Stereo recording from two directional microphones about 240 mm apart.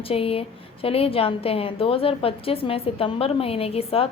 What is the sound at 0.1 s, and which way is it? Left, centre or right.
A woman's voice, left.